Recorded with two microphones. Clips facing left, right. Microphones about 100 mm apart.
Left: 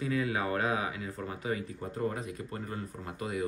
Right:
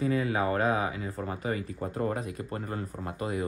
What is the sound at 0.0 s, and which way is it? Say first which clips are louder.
Speech: right 4 dB; 40° right (ahead or behind).